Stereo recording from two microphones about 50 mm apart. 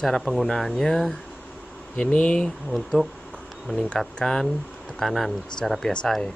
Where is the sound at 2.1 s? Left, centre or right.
Left.